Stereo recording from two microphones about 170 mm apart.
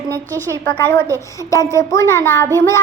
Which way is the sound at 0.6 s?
15° left (ahead or behind).